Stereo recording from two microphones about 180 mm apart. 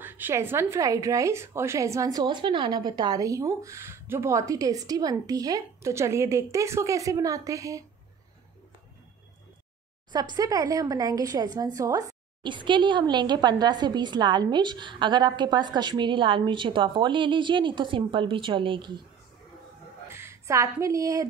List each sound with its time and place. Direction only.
0.0 s a woman's voice: 10° right (ahead or behind)
10.1 s speech: 20° right (ahead or behind)
20.1 s speech: 15° right (ahead or behind)